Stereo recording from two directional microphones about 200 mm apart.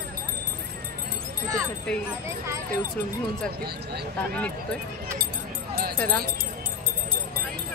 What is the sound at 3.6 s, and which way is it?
Speech, 55° right (ahead or behind).